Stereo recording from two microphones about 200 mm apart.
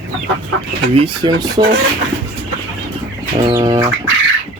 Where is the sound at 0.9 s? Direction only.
20° right (ahead or behind).